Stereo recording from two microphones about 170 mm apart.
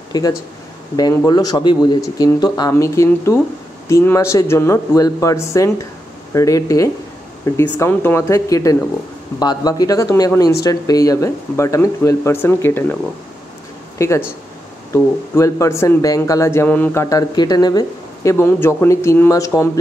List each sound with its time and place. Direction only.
0.1 s speech: 20° left (ahead or behind)
13.9 s speech: 15° left (ahead or behind)
15.3 s speech: 15° left (ahead or behind)